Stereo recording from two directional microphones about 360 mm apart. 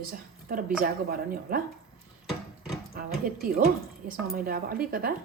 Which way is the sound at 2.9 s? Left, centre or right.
Right.